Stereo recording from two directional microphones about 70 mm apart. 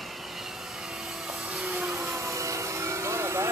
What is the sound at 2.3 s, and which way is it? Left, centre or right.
Vehicle, right.